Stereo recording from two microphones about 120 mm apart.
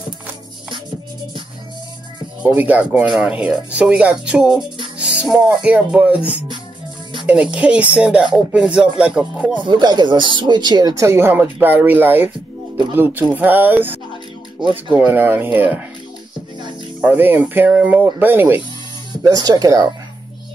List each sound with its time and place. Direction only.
2.5 s speech: 15° right (ahead or behind)
9.6 s speech: 40° right (ahead or behind)
11.1 s speech: 20° right (ahead or behind)
17.0 s speech: 15° right (ahead or behind)
19.2 s speech: 30° right (ahead or behind)